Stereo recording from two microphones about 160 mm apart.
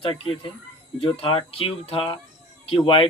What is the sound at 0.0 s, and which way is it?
Speech, 30° left (ahead or behind).